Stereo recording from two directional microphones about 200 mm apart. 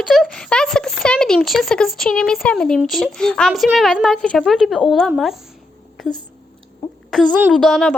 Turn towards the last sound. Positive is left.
turn(degrees=0)  # may be behind; listen again after turning